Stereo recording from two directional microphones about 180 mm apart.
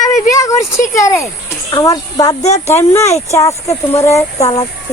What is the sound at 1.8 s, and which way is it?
Speech, 20° left (ahead or behind).